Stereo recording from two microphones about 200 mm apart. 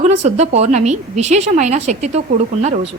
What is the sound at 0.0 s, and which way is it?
A woman's voice, 35° right (ahead or behind).